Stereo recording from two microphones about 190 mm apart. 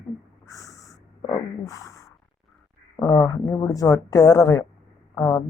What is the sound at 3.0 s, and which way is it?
Music, 15° left (ahead or behind).